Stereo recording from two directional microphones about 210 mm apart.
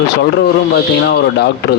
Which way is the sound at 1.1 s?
50° left (ahead or behind).